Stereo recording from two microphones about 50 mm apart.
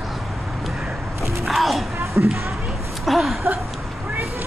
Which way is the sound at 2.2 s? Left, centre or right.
Right.